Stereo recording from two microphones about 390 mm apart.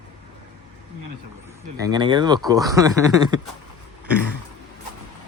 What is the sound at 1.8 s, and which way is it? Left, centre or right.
Speech, centre.